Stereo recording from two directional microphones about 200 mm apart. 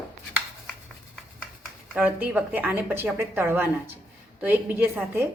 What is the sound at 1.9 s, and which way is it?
A woman's voice, 5° right (ahead or behind).